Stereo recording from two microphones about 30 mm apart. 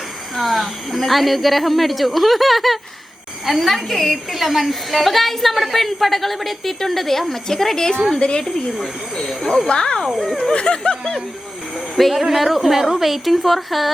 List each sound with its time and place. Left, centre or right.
0.3 s a woman's voice: centre
8.2 s speech: left
9.6 s speech: left
10.2 s speech: centre
10.5 s speech: left
11.9 s a woman's voice: centre